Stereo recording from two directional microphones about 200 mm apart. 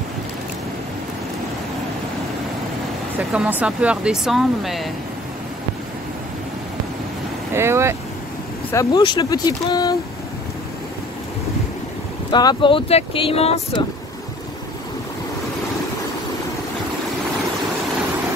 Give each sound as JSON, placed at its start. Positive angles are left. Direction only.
{"t": 3.2, "sound": "speech", "side_deg": -10}
{"t": 7.5, "sound": "speech", "side_deg": -15}
{"t": 8.7, "sound": "speech", "side_deg": 20}
{"t": 12.3, "sound": "speech", "side_deg": 20}